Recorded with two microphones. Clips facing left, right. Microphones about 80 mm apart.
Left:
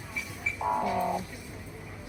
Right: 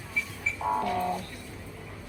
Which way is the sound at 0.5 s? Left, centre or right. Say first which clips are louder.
Even; centre.